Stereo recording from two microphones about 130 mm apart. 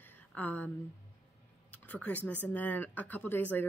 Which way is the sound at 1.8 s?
10° left (ahead or behind).